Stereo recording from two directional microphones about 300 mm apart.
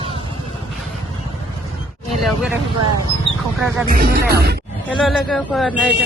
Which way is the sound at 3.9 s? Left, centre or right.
Right.